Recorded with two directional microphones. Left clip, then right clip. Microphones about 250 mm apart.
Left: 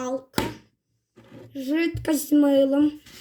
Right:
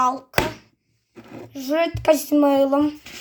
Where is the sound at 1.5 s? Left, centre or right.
Centre.